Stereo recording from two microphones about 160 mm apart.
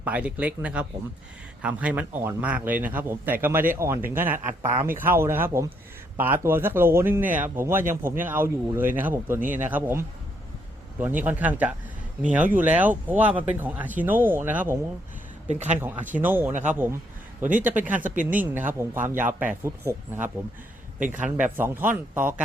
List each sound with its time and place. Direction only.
0.0 s speech: 10° right (ahead or behind)
15.4 s speech: 45° right (ahead or behind)
16.1 s speech: 10° right (ahead or behind)
16.5 s speech: 50° right (ahead or behind)
17.6 s speech: 10° right (ahead or behind)
18.1 s speech: 55° right (ahead or behind)
19.0 s speech: 10° right (ahead or behind)